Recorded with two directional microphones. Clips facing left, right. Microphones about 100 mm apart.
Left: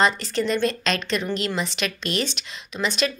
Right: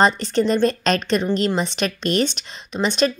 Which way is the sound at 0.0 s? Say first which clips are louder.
Right 4 dB; 35° right (ahead or behind).